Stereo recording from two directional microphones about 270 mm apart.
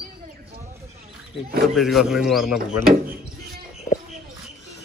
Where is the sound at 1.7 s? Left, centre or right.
Centre.